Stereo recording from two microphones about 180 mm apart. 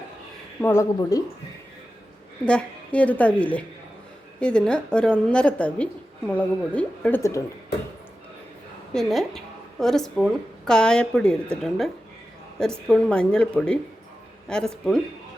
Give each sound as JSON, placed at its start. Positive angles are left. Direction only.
{"t": 0.6, "sound": "a woman's voice", "side_deg": 15}
{"t": 2.4, "sound": "a woman's voice", "side_deg": 5}
{"t": 8.9, "sound": "a woman's voice", "side_deg": 0}
{"t": 12.5, "sound": "speech", "side_deg": 5}